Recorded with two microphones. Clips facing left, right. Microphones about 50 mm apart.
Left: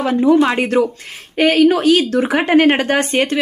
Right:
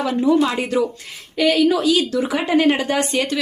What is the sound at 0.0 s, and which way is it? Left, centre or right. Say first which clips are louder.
A woman's voice: left 4 dB; left.